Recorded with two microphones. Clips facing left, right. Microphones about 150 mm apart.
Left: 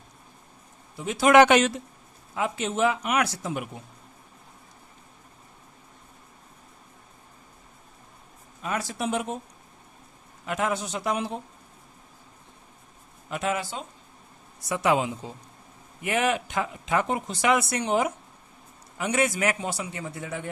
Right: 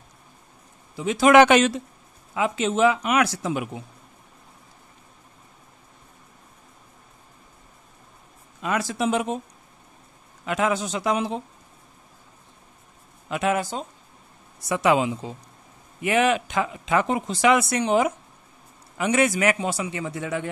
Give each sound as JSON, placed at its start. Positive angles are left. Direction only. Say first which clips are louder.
{"t": 0.9, "sound": "speech", "louder": "right 2 dB", "side_deg": -90}
{"t": 8.6, "sound": "speech", "louder": "right 5 dB", "side_deg": -90}
{"t": 10.4, "sound": "speech", "louder": "right 4 dB", "side_deg": -90}
{"t": 13.3, "sound": "speech", "louder": "right 4 dB", "side_deg": -70}
{"t": 13.6, "sound": "speech", "louder": "right 5 dB", "side_deg": -40}
{"t": 14.7, "sound": "speech", "louder": "right 3 dB", "side_deg": -90}